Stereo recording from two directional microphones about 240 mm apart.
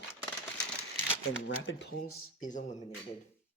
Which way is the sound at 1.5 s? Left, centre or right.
Left.